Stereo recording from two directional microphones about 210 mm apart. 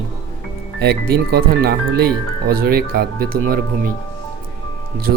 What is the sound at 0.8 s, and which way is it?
Speech, 50° right (ahead or behind).